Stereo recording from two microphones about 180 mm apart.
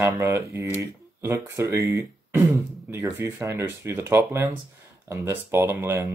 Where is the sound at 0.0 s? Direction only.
15° right (ahead or behind).